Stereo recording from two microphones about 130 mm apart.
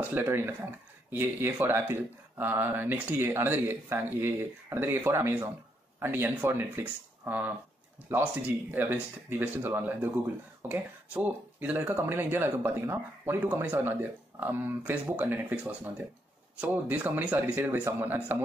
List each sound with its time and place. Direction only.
0.0 s speech: 15° right (ahead or behind)